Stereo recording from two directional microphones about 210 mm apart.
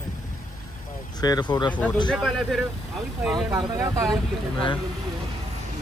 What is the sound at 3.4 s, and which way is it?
Speech, 15° right (ahead or behind).